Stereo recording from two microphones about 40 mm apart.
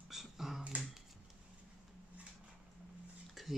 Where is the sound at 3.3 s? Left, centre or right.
Centre.